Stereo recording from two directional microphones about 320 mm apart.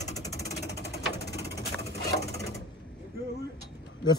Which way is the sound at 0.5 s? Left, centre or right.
Left.